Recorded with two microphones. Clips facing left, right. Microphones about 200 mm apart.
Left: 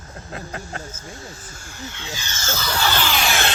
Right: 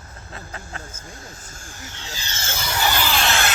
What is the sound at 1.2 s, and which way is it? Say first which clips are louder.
Speech: left 2 dB; 45° right (ahead or behind).